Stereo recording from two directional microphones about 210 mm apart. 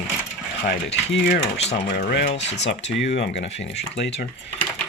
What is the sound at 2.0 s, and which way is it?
Speech, 45° left (ahead or behind).